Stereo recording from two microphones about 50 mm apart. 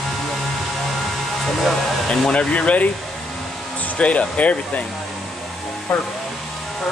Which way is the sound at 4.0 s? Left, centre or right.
Left.